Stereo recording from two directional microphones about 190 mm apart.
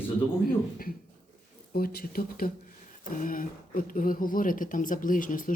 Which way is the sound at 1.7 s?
50° left (ahead or behind).